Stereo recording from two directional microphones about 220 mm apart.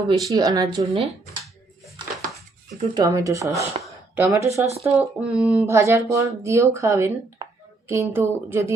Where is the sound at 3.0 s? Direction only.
15° right (ahead or behind).